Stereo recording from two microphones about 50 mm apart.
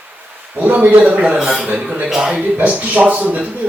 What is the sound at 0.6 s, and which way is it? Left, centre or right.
Speech, right.